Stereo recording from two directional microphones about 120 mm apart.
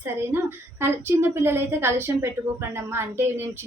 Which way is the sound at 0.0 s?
20° right (ahead or behind).